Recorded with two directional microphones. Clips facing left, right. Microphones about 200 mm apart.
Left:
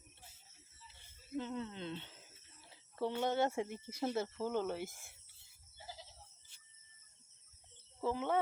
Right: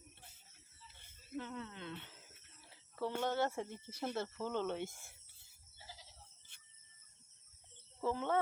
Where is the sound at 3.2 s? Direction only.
15° left (ahead or behind).